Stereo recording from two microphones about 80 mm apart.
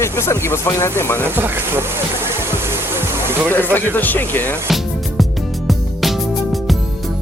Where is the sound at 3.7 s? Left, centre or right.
Left.